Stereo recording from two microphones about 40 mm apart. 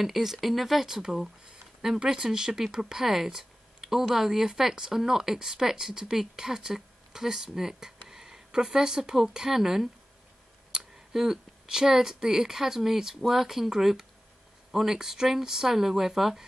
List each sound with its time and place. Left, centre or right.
0.0 s speech: centre
0.8 s speech: centre
10.7 s a sound: centre
11.1 s speech: centre